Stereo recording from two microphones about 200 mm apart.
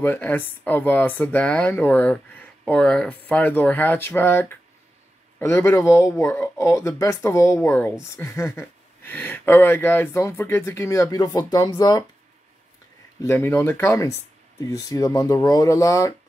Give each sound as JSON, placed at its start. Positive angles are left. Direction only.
{"t": 0.0, "sound": "speech", "side_deg": 10}
{"t": 13.2, "sound": "speech", "side_deg": 10}